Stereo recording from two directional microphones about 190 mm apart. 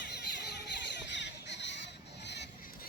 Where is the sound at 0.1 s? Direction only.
60° left (ahead or behind).